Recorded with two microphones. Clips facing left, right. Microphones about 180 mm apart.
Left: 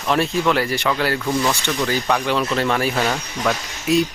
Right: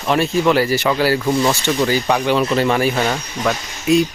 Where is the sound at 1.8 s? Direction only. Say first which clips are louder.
Right 3 dB; centre (ahead or behind).